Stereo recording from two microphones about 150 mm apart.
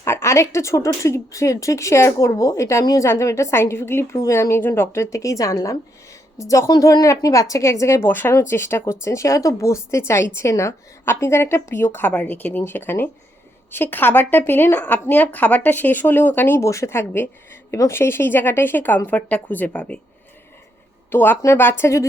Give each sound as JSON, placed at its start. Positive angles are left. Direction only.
{"t": 0.0, "sound": "a woman's voice", "side_deg": 20}
{"t": 21.1, "sound": "a woman's voice", "side_deg": 15}